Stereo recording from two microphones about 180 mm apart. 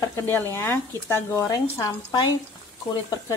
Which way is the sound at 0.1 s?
15° left (ahead or behind).